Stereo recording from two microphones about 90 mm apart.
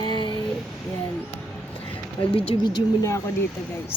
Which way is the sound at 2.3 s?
90° left.